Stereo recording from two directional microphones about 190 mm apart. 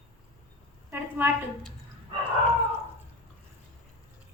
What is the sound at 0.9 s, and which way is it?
Speech, 10° right (ahead or behind).